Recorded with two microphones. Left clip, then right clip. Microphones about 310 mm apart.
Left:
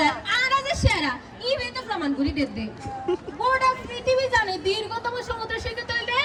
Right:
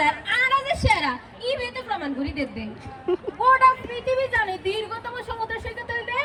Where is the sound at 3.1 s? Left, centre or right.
Centre.